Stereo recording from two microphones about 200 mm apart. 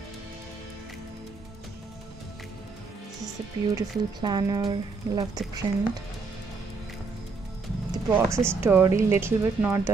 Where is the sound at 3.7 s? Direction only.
20° right (ahead or behind).